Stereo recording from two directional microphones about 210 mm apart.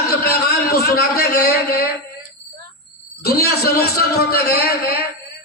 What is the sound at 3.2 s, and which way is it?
A man's voice, 45° left (ahead or behind).